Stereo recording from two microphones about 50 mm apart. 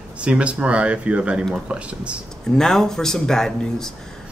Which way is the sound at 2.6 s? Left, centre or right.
Centre.